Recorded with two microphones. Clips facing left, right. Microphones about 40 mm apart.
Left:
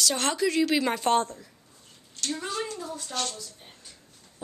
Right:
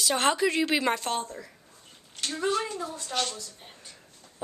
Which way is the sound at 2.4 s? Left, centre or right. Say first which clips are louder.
Right 8 dB; right.